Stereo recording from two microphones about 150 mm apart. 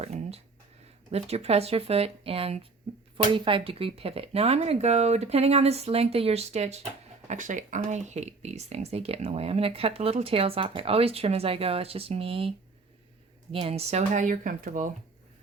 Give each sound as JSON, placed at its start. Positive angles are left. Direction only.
{"t": 0.0, "sound": "a sound", "side_deg": -45}
{"t": 1.1, "sound": "speech", "side_deg": -45}
{"t": 7.3, "sound": "speech", "side_deg": -55}